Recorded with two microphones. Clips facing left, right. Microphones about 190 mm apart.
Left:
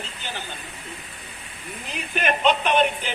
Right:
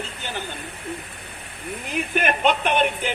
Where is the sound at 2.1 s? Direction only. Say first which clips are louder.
Even; 50° right (ahead or behind).